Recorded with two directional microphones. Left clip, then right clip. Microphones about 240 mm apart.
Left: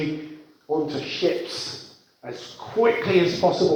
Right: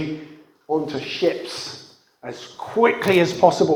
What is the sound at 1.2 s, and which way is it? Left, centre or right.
Speech, right.